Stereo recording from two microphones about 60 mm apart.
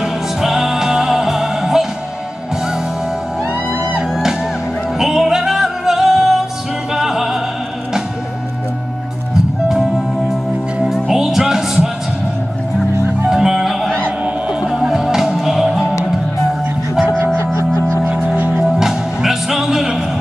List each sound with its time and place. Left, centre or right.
0.0 s music: centre
4.1 s music: centre
9.7 s music: centre
13.3 s music: centre
14.2 s music: centre
15.8 s music: left
18.0 s music: right
18.6 s music: centre